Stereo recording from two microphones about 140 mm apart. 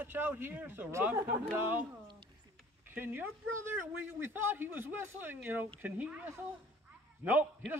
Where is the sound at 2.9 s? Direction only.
15° right (ahead or behind).